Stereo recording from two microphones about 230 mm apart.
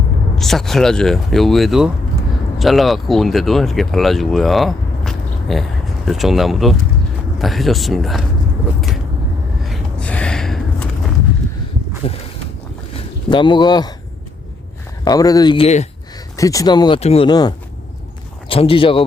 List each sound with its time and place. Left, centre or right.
0.3 s speech: centre
9.6 s a sound: centre
12.0 s speech: left
13.3 s speech: centre
15.0 s speech: centre
16.4 s speech: centre